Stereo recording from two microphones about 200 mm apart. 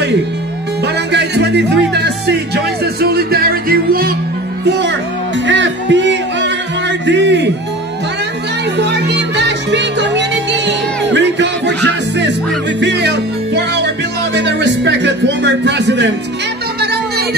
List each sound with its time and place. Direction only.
1.1 s music: 60° right (ahead or behind)
4.6 s music: 60° right (ahead or behind)
8.7 s music: 55° right (ahead or behind)
12.8 s music: 60° right (ahead or behind)